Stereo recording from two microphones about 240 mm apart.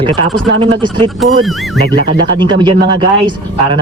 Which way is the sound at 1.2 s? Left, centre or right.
Centre.